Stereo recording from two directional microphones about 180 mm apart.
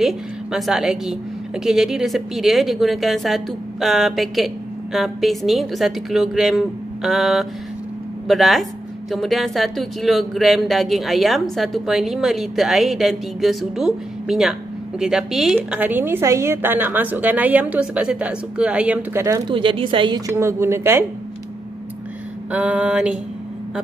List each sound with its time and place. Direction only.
0.0 s a woman's voice: centre (ahead or behind)
19.5 s a woman's voice: 30° right (ahead or behind); by 21.0 s 15° right (ahead or behind)
22.5 s a woman's voice: 5° right (ahead or behind)